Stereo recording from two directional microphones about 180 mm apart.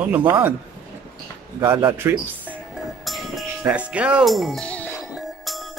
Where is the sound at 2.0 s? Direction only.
15° right (ahead or behind).